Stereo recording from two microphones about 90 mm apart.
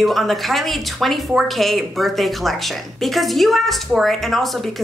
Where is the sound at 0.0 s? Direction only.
Centre (ahead or behind).